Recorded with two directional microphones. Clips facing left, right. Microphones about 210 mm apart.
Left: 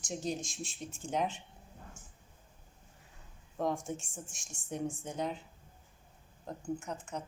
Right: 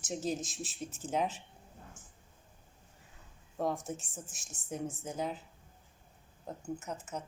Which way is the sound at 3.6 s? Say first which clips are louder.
Even; centre (ahead or behind).